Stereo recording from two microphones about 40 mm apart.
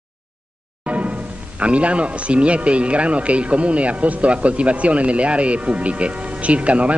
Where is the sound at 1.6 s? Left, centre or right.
Right.